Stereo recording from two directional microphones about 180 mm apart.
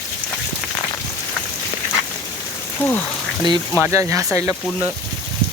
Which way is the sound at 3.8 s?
15° right (ahead or behind).